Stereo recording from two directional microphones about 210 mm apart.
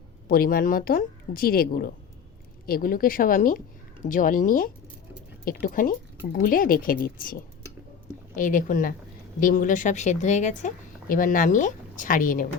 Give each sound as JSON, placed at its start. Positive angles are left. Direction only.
{"t": 0.3, "sound": "a woman's voice", "side_deg": 45}